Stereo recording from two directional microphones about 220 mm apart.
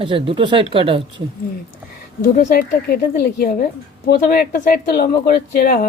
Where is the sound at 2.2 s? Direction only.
40° left (ahead or behind).